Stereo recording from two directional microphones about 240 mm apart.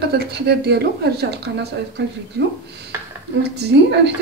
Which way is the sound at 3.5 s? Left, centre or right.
Right.